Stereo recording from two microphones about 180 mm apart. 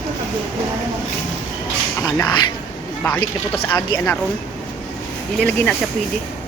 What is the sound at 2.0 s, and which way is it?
Speech, 20° left (ahead or behind).